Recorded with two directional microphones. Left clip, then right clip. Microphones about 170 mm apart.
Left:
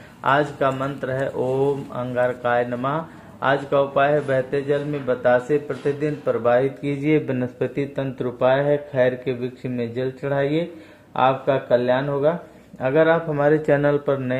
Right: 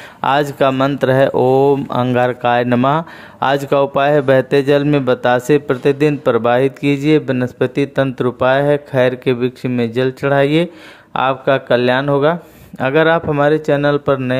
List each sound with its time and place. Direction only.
0.2 s speech: 75° right (ahead or behind)
6.8 s speech: 30° right (ahead or behind)
13.7 s speech: 15° right (ahead or behind)
14.0 s speech: 25° right (ahead or behind)